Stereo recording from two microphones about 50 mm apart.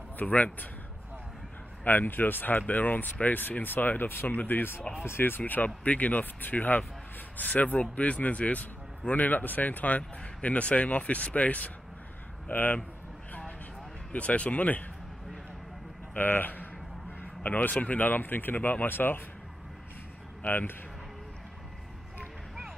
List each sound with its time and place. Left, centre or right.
0.2 s a man's voice: left
1.9 s a man's voice: left
5.4 s a man's voice: left
14.1 s speech: left
16.2 s a man's voice: left
20.4 s a man's voice: left